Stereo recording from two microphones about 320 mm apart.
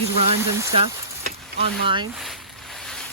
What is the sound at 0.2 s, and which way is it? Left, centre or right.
Speech, centre.